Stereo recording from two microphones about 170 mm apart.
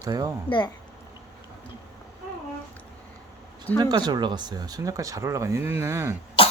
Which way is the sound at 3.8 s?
25° right (ahead or behind).